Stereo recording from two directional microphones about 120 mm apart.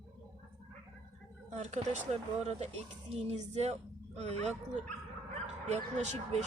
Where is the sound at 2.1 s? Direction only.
70° right (ahead or behind).